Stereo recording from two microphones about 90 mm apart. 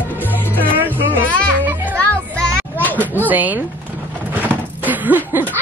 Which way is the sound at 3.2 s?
20° right (ahead or behind).